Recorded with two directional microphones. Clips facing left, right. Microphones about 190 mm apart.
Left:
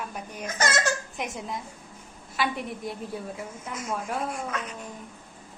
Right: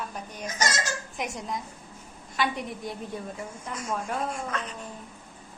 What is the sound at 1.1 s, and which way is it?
A woman's voice, centre (ahead or behind).